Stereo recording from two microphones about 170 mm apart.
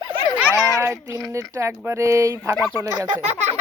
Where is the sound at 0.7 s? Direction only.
15° right (ahead or behind).